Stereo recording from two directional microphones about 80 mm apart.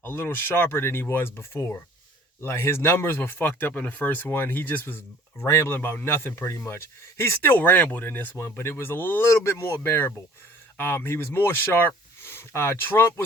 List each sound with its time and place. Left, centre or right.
0.0 s speech: left
9.3 s speech: left